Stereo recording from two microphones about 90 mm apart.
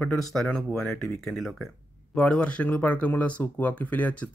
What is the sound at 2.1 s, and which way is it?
Speech, 15° left (ahead or behind).